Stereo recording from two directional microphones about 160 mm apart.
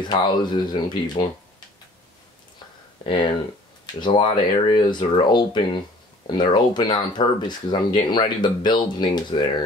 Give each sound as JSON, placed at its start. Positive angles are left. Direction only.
{"t": 0.0, "sound": "speech", "side_deg": 25}
{"t": 3.0, "sound": "speech", "side_deg": 30}